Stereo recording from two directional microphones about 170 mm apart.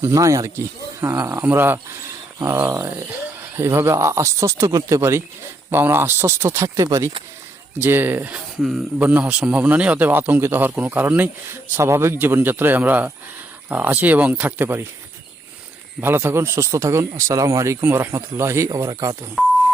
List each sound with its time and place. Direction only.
0.0 s speech: 15° right (ahead or behind)
16.0 s speech: 15° right (ahead or behind)